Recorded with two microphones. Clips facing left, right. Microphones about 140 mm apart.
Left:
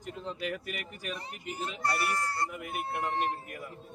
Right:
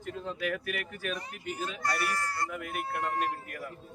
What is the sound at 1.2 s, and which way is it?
Speech, 30° left (ahead or behind).